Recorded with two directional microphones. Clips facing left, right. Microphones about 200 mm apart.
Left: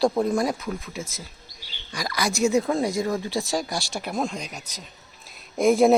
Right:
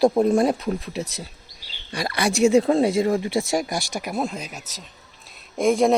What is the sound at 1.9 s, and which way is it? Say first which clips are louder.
Speech: right 4 dB; 30° right (ahead or behind).